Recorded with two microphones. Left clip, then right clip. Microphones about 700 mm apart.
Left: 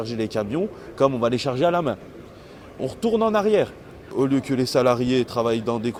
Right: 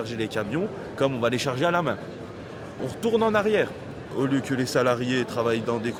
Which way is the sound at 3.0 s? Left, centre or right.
Left.